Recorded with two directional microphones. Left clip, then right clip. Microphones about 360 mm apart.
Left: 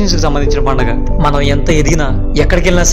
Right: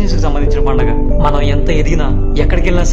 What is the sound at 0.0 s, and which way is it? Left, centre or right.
Speech, centre.